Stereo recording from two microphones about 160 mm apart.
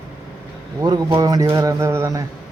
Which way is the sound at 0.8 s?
25° right (ahead or behind).